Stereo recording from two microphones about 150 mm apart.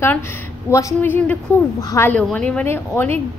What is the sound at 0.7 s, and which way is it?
Speech, 20° left (ahead or behind).